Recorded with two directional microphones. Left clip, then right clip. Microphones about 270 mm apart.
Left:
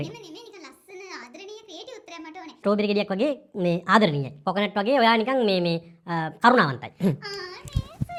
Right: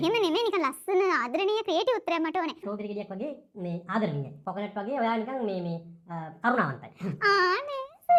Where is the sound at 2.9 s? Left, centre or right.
Left.